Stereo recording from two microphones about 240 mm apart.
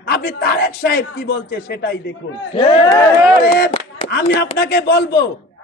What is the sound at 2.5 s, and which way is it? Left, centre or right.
Speech, left.